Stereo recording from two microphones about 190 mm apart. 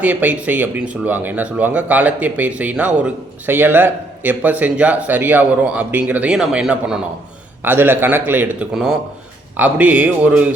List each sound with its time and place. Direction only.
0.0 s speech: 10° right (ahead or behind)